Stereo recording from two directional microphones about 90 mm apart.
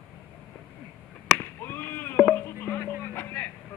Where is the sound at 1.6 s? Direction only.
25° left (ahead or behind).